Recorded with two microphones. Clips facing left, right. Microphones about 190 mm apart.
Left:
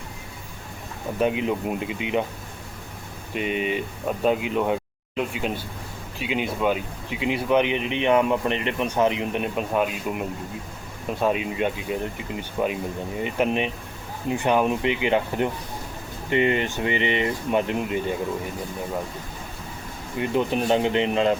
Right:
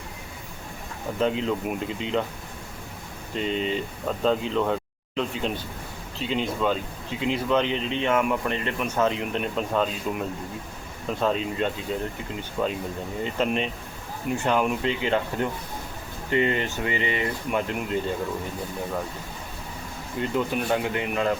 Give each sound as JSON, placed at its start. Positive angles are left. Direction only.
{"t": 1.2, "sound": "speech", "side_deg": 15}
{"t": 3.3, "sound": "speech", "side_deg": 15}
{"t": 20.1, "sound": "speech", "side_deg": 20}